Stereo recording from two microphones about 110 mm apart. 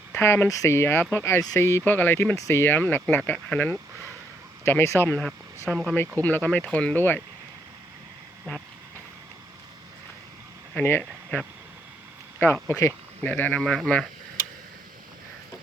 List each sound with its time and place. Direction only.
0.2 s speech: 25° left (ahead or behind)
4.6 s speech: 25° left (ahead or behind)
5.7 s speech: 5° left (ahead or behind)
10.8 s speech: 20° left (ahead or behind)
12.6 s speech: 25° left (ahead or behind)
13.2 s speech: 15° left (ahead or behind)
13.6 s speech: 5° left (ahead or behind)